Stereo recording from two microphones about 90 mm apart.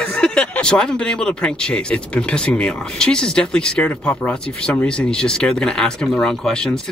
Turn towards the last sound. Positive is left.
turn(degrees=5)  # may be behind; listen again after turning